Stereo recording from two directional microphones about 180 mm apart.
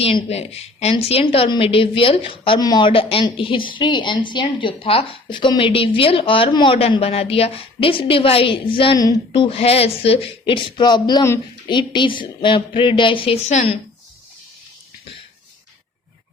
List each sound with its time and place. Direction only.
0.0 s a woman's voice: 35° left (ahead or behind)